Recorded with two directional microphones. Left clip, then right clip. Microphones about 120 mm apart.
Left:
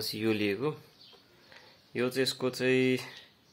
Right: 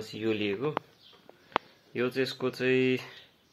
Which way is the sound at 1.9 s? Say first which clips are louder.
Even; 20° left (ahead or behind).